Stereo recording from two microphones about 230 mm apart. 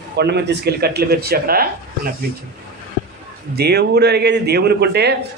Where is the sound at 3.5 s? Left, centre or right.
Right.